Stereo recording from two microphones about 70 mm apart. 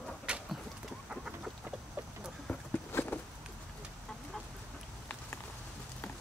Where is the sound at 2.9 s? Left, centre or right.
Left.